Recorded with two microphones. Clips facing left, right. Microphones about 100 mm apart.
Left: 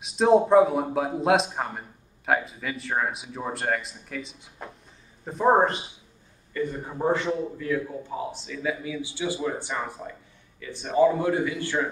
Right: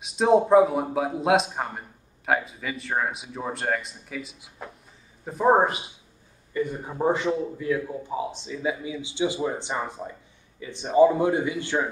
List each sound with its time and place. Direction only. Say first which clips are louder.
0.0 s a man's voice: even; centre (ahead or behind)
6.5 s a man's voice: right 1 dB; 15° right (ahead or behind)